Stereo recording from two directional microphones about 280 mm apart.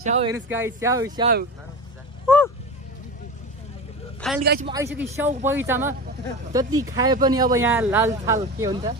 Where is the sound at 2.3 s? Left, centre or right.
Centre.